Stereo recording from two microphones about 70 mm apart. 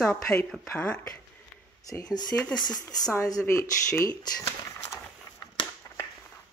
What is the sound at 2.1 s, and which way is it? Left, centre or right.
Speech, left.